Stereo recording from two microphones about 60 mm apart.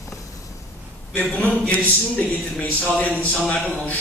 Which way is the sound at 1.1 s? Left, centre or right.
Left.